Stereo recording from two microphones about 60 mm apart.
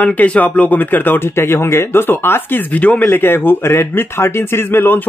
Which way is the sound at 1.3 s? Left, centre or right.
Left.